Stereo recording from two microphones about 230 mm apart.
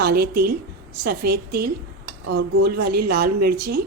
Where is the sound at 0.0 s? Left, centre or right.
Right.